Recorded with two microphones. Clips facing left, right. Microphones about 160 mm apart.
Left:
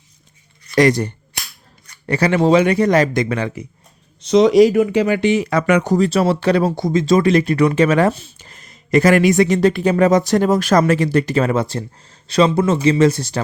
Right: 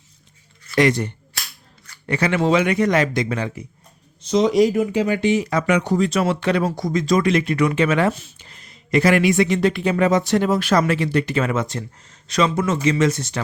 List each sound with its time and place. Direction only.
0.8 s speech: 40° left (ahead or behind)
3.2 s speech: 75° left (ahead or behind); by 5.9 s 55° left (ahead or behind)
5.9 s speech: 35° left (ahead or behind)
8.4 s speech: 45° left (ahead or behind)